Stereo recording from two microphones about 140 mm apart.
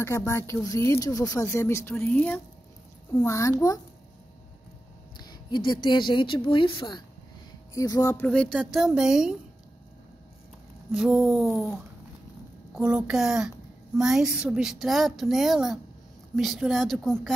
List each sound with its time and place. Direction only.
0.3 s speech: 20° left (ahead or behind)
3.3 s speech: 20° left (ahead or behind)
5.2 s a woman's voice: 30° left (ahead or behind)
7.7 s speech: 25° left (ahead or behind)
8.3 s a woman's voice: 5° left (ahead or behind)
10.9 s a woman's voice: 5° right (ahead or behind)
12.7 s a woman's voice: 5° right (ahead or behind)